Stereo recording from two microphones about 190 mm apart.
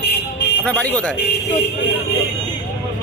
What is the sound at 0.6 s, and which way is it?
Speech, 10° left (ahead or behind).